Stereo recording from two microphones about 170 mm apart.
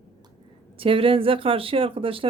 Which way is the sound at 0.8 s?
30° right (ahead or behind).